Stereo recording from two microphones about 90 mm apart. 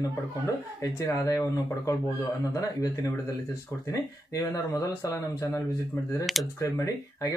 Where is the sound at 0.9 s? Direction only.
40° left (ahead or behind).